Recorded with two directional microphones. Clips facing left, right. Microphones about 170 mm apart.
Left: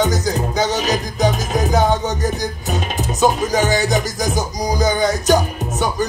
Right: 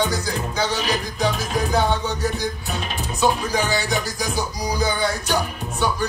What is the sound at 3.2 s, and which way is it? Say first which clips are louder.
Music: left 4 dB; 40° left (ahead or behind).